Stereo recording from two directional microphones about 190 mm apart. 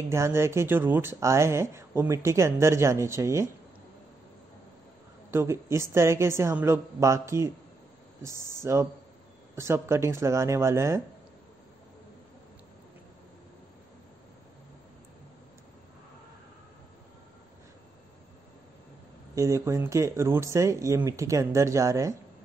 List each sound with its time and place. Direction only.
0.1 s speech: 15° right (ahead or behind)
5.3 s speech: 15° right (ahead or behind)
19.3 s speech: 15° right (ahead or behind)